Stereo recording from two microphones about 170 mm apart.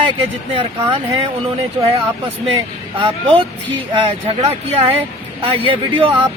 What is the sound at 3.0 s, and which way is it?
Speech, 30° right (ahead or behind).